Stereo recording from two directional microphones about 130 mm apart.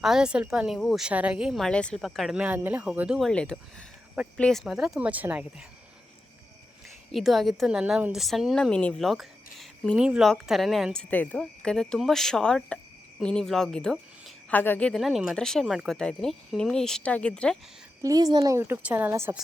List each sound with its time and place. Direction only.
0.0 s a woman's voice: 5° right (ahead or behind)
3.2 s a woman's voice: 5° left (ahead or behind)
7.1 s a woman's voice: centre (ahead or behind)
11.1 s a woman's voice: 15° left (ahead or behind)
18.0 s a woman's voice: 30° right (ahead or behind)